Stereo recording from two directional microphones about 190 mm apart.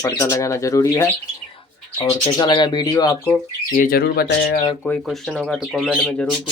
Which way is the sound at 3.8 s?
50° left (ahead or behind).